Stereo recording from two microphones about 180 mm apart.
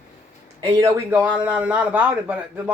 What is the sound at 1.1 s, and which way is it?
Speech, 5° right (ahead or behind).